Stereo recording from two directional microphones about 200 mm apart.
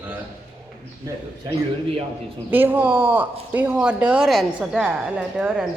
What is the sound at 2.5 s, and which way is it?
Speech, 10° right (ahead or behind).